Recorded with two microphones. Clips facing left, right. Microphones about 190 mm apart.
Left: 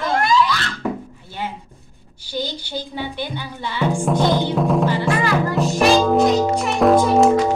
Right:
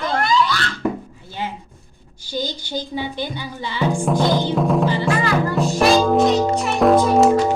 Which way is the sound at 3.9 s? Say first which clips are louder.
Even; 5° right (ahead or behind).